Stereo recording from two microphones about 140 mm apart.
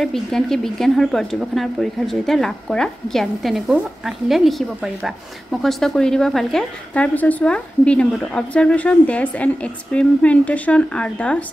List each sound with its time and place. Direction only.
0.0 s speech: centre (ahead or behind)